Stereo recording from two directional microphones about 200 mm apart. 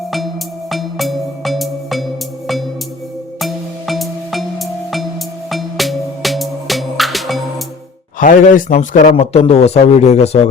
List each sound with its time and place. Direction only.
0.7 s music: centre (ahead or behind)
3.4 s music: centre (ahead or behind)
8.2 s a man's voice: 40° left (ahead or behind)